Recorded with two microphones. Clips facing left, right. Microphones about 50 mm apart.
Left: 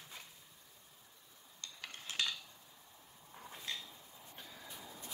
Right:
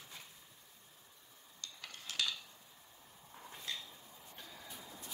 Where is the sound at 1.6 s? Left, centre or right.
Left.